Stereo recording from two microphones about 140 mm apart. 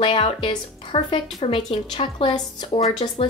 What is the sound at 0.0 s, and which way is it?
A woman's voice, 40° left (ahead or behind).